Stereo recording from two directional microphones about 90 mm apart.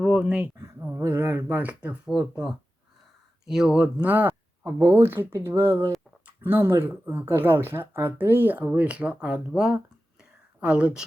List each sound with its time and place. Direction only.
0.0 s speech: 10° right (ahead or behind)
0.8 s a sound: 20° right (ahead or behind)
1.0 s speech: 25° right (ahead or behind)
2.0 s speech: 5° right (ahead or behind)
4.0 s speech: 20° right (ahead or behind)